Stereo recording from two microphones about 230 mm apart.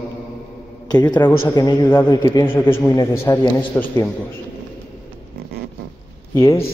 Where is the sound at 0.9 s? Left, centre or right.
Centre.